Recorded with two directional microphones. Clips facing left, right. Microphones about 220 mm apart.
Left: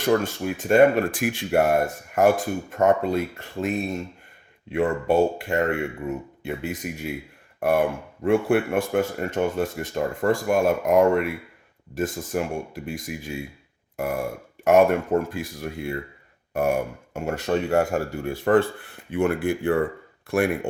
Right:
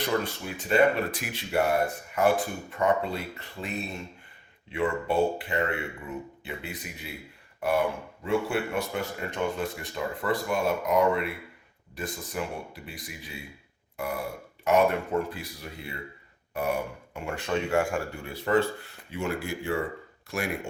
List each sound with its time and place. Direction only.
0.0 s speech: 50° left (ahead or behind)
17.2 s speech: 40° left (ahead or behind); by 20.4 s 60° left (ahead or behind)